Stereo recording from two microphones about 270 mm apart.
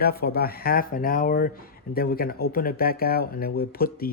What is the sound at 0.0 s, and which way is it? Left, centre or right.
Speech, left.